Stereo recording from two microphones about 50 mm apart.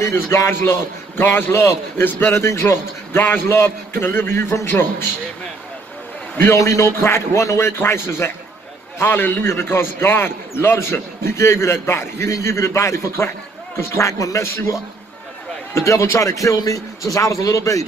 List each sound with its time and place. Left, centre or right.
0.0 s a man's voice: left
2.0 s a man's voice: left
2.3 s a man's voice: left
6.5 s a man's voice: left
7.0 s a man's voice: left
8.9 s a man's voice: left
15.7 s a man's voice: left